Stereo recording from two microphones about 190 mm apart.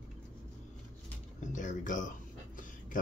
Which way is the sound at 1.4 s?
40° left (ahead or behind).